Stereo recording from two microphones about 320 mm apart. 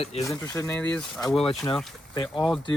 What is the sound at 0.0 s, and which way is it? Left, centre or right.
Speech, centre.